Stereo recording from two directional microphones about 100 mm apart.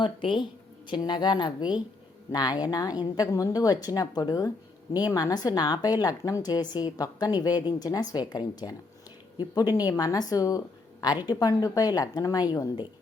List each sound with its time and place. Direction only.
0.0 s a woman's voice: 55° left (ahead or behind); by 12.7 s 35° left (ahead or behind)